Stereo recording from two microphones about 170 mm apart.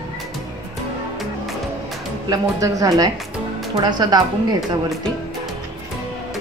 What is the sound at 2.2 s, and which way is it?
A woman's voice, 20° right (ahead or behind).